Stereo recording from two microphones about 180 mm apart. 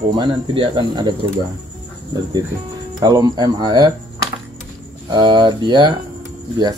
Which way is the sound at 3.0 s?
20° right (ahead or behind).